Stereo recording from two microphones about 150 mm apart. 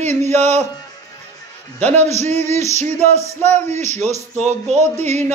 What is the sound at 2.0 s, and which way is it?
Speech, 50° right (ahead or behind).